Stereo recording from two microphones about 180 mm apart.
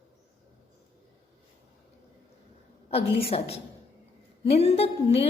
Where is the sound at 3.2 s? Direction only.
35° left (ahead or behind).